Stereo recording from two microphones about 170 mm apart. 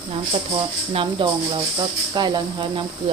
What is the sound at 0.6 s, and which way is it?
Speech, 30° right (ahead or behind).